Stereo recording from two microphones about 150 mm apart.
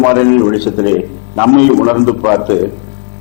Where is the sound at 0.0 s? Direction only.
20° left (ahead or behind).